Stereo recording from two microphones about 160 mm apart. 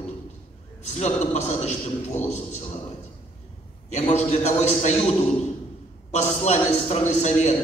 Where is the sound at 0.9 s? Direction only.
45° left (ahead or behind).